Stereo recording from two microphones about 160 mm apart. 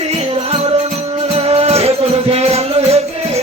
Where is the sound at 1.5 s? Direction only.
40° right (ahead or behind).